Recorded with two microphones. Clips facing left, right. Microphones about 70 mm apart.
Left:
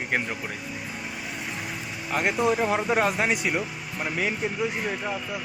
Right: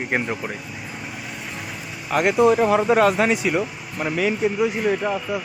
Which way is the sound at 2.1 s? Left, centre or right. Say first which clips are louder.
Right 6 dB; right.